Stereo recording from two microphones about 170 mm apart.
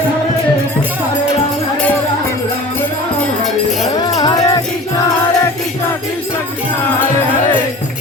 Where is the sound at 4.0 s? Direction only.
25° left (ahead or behind).